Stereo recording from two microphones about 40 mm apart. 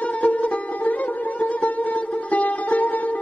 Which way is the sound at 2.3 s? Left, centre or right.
Left.